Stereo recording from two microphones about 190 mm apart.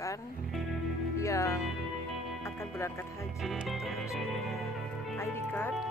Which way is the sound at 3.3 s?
Centre (ahead or behind).